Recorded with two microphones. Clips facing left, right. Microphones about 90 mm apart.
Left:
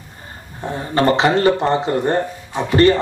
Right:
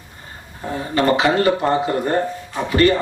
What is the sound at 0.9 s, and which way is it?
Speech, 30° left (ahead or behind).